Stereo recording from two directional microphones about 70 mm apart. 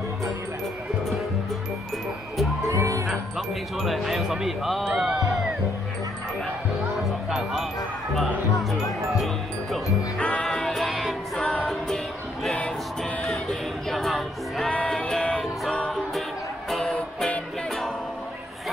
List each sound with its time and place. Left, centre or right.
2.7 s music: right
3.7 s speech: centre
7.1 s music: centre
10.1 s music: centre
10.5 s music: centre
13.2 s music: centre
14.6 s music: centre
16.7 s music: centre